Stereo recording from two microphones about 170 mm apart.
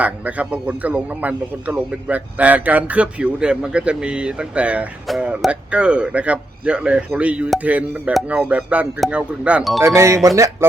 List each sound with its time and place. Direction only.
0.0 s a man's voice: 10° right (ahead or behind)
9.8 s a man's voice: 15° right (ahead or behind)